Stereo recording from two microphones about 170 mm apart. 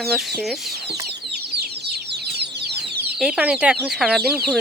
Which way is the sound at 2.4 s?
75° right (ahead or behind).